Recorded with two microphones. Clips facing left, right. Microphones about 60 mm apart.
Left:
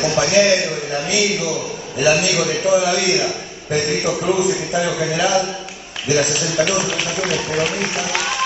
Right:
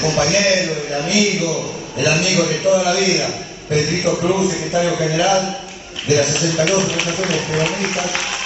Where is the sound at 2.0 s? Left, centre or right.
Left.